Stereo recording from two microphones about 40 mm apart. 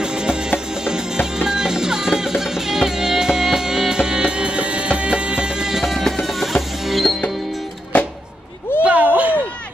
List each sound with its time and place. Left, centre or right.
0.0 s music: right
5.8 s music: centre
8.8 s a sound: right